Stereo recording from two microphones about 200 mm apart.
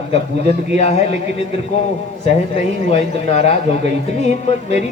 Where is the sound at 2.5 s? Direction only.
30° left (ahead or behind).